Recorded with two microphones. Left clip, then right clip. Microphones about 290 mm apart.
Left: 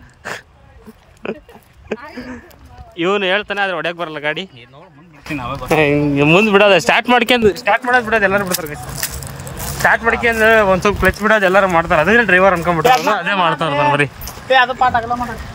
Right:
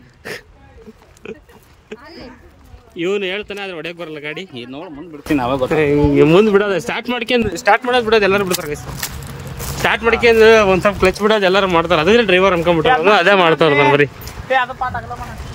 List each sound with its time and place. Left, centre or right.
3.0 s speech: centre
5.3 s speech: centre
5.7 s speech: centre
7.6 s speech: centre
10.8 s speech: centre
11.1 s speech: centre
14.5 s speech: left